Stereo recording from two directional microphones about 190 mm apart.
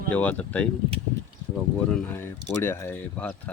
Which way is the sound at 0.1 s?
5° left (ahead or behind).